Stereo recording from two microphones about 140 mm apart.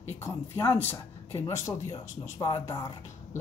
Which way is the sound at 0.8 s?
20° left (ahead or behind).